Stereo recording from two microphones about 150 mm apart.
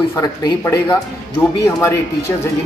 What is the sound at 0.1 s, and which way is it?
Speech, 20° left (ahead or behind).